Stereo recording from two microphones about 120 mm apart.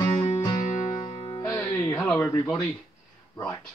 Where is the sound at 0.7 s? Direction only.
90° left.